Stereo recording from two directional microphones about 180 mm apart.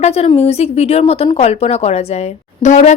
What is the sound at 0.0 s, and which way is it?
A woman's voice, 35° left (ahead or behind).